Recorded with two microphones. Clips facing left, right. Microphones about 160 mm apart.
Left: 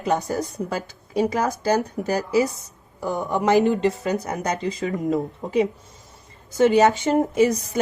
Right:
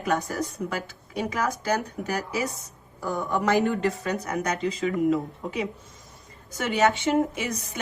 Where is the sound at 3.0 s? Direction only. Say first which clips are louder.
Left 3 dB; 20° left (ahead or behind).